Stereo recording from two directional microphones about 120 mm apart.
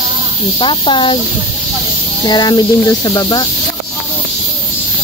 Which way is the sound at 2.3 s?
35° left (ahead or behind).